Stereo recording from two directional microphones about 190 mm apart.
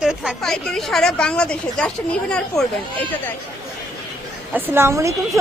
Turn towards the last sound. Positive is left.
turn(degrees=-15)  # may be behind; listen again after turning